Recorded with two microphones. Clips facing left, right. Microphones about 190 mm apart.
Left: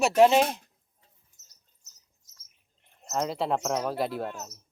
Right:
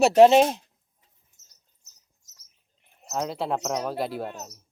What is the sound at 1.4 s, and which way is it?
Rodents, 55° right (ahead or behind).